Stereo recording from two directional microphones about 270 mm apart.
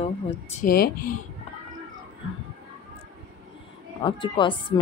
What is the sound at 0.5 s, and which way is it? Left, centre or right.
Speech, left.